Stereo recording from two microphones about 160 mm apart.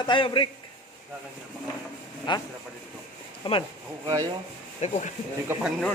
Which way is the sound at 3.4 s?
35° left (ahead or behind).